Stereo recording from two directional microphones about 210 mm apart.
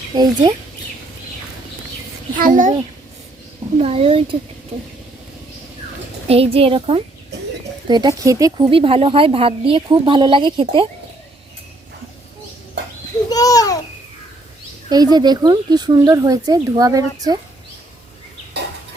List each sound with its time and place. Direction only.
0.1 s a woman's voice: 20° right (ahead or behind)
2.4 s a child's voice: 40° right (ahead or behind)
3.8 s a woman's voice: 30° right (ahead or behind)
6.2 s a woman's voice: 30° right (ahead or behind)
13.3 s a child's voice: 15° left (ahead or behind)
14.8 s speech: 20° right (ahead or behind)